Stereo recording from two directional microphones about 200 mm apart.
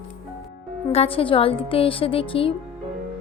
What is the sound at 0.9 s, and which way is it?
A woman's voice, 30° left (ahead or behind).